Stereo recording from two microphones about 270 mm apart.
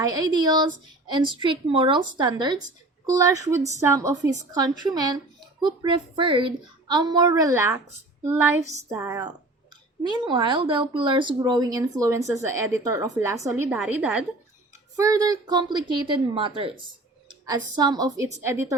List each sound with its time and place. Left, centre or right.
0.0 s a woman's voice: centre
17.7 s speech: centre